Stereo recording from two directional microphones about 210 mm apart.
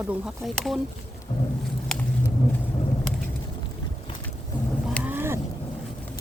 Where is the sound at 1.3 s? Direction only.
20° left (ahead or behind).